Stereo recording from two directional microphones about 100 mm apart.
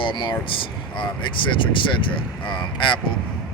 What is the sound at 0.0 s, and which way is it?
Speech, 55° left (ahead or behind).